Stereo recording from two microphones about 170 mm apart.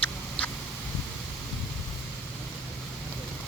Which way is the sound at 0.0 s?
10° left (ahead or behind).